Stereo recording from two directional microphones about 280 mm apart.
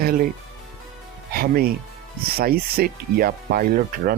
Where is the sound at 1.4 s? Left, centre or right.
Right.